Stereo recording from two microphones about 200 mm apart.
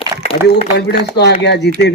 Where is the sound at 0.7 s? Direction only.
55° left (ahead or behind).